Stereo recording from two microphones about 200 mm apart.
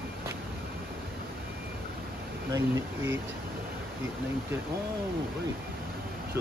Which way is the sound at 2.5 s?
15° right (ahead or behind).